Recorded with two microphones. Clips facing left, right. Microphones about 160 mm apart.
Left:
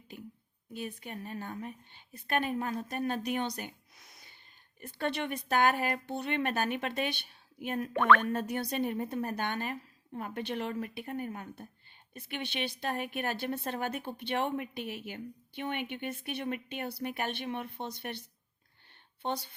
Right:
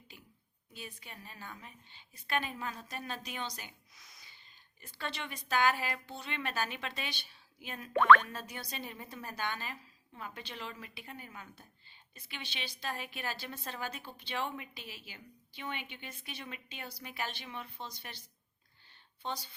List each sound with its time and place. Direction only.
0.7 s a woman's voice: 55° left (ahead or behind)
19.2 s a woman's voice: 60° left (ahead or behind)